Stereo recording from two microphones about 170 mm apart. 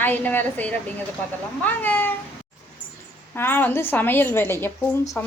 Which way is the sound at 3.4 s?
10° left (ahead or behind).